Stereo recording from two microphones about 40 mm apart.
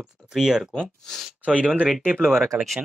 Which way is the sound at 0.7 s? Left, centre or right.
Centre.